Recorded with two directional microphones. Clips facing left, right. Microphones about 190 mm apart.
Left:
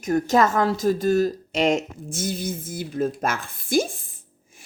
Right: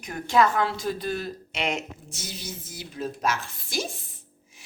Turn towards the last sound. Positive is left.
turn(degrees=50)  # may be behind; listen again after turning